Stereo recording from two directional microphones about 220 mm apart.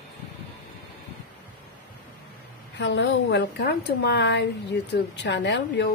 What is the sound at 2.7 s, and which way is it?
A woman's voice, 55° left (ahead or behind).